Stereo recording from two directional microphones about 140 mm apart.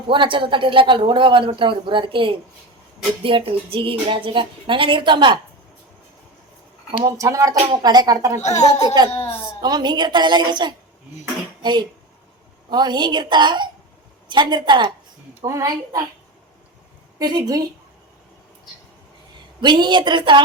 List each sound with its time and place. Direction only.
0.1 s speech: 35° right (ahead or behind)
7.0 s speech: 25° right (ahead or behind)
8.4 s a child's voice: 55° left (ahead or behind)
9.6 s speech: 30° right (ahead or behind)
17.2 s speech: 25° right (ahead or behind)
19.6 s speech: 35° right (ahead or behind)